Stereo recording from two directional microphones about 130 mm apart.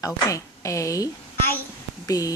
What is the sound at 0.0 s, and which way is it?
A woman's voice, 25° left (ahead or behind).